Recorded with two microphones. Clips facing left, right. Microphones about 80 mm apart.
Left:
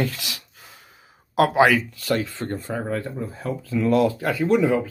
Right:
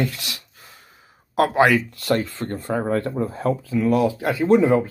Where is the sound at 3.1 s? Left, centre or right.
Right.